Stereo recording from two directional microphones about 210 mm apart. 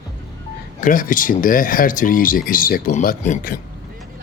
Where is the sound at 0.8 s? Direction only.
40° left (ahead or behind).